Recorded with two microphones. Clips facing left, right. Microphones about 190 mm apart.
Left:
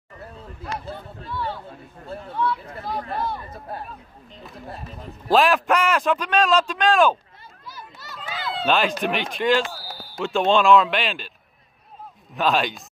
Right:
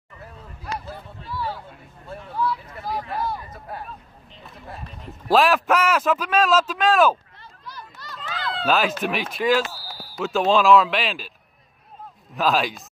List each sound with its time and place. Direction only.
0.9 s a sound: 5° right (ahead or behind)
2.3 s a man's voice: centre (ahead or behind)
3.4 s speech: 30° left (ahead or behind)
4.4 s a man's voice: centre (ahead or behind)
7.6 s a sound: 5° left (ahead or behind)
9.0 s a man's voice: 5° right (ahead or behind)
12.4 s a man's voice: centre (ahead or behind)